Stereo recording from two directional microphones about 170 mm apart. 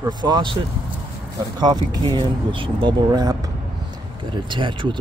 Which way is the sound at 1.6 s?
25° right (ahead or behind).